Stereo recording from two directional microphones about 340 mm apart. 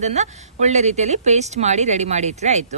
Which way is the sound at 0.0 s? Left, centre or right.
Centre.